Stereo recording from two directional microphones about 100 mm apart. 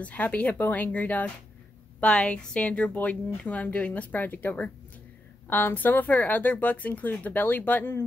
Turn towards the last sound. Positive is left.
turn(degrees=20)  # may be behind; listen again after turning